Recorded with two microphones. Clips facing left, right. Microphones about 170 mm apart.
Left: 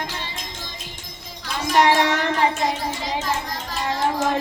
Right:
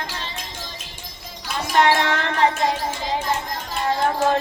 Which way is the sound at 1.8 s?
15° left (ahead or behind).